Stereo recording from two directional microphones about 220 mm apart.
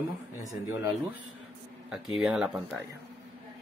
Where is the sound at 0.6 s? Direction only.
10° right (ahead or behind).